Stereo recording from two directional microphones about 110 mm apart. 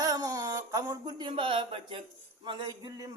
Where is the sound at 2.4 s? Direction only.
40° right (ahead or behind).